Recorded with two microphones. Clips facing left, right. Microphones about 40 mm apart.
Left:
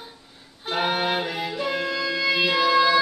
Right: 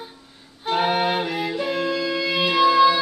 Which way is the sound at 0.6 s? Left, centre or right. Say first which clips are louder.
Right 3 dB; centre.